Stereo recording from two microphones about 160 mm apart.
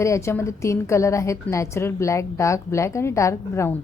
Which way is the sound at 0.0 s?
20° left (ahead or behind).